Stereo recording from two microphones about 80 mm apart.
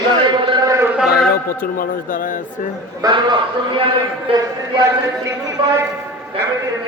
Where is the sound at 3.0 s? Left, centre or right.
Right.